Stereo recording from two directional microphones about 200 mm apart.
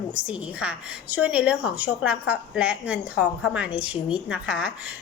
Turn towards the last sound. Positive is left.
turn(degrees=-5)  # may be behind; listen again after turning